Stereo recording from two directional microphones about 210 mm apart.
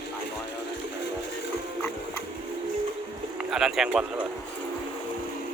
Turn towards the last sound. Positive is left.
turn(degrees=0)  # may be behind; listen again after turning